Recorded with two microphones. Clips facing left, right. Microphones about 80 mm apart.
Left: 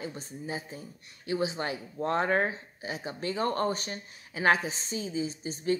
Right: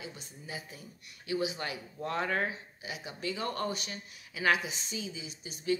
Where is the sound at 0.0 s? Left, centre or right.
Left.